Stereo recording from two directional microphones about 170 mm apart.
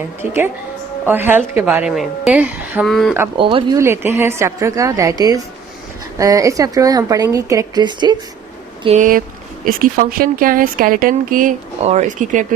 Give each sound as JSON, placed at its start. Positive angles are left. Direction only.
{"t": 1.0, "sound": "a woman's voice", "side_deg": -10}
{"t": 2.8, "sound": "speech", "side_deg": 0}
{"t": 3.3, "sound": "speech", "side_deg": -30}
{"t": 3.8, "sound": "a woman's voice", "side_deg": -15}
{"t": 9.0, "sound": "speech", "side_deg": -55}